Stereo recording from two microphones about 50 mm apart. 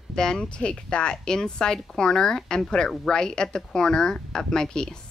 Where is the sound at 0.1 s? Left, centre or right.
Centre.